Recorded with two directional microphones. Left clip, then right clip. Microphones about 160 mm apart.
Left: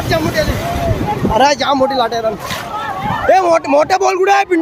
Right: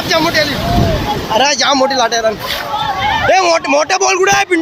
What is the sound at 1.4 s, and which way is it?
Speech, 20° left (ahead or behind).